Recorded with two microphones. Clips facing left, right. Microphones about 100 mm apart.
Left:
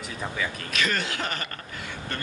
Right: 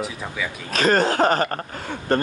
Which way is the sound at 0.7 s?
40° right (ahead or behind).